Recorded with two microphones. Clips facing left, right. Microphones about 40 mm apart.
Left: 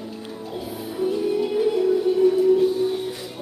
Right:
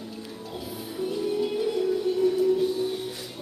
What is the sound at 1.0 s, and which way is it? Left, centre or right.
Music, centre.